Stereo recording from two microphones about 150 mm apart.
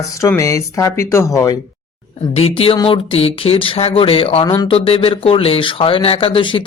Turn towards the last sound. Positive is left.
turn(degrees=35)  # may be behind; listen again after turning